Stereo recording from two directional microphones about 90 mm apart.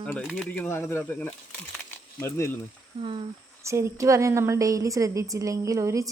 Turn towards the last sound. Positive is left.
turn(degrees=-35)  # may be behind; listen again after turning